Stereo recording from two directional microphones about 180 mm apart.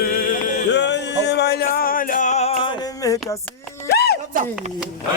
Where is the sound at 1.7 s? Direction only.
50° left (ahead or behind).